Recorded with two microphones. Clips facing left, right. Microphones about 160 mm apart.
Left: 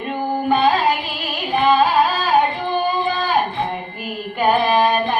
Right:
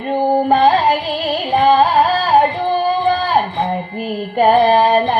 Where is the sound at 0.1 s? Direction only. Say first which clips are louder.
Right 6 dB; 40° right (ahead or behind).